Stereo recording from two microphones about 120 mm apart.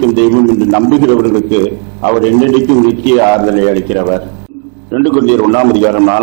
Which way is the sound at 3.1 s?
20° right (ahead or behind).